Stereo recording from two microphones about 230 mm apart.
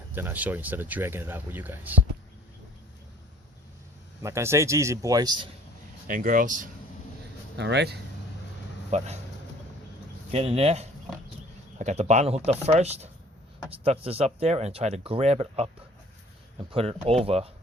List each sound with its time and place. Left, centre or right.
0.1 s speech: centre
4.2 s speech: centre
6.1 s speech: right
7.5 s speech: right
8.9 s speech: right
10.3 s speech: right
16.7 s speech: right